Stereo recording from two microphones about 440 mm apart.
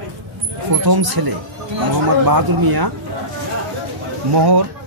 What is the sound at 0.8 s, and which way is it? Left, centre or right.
Speech, right.